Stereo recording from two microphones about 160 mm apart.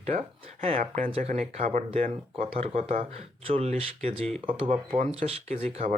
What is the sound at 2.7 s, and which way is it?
Speech, 55° right (ahead or behind).